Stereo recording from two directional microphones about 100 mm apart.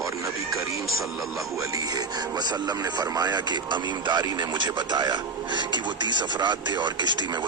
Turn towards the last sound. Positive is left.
turn(degrees=-50)  # may be behind; listen again after turning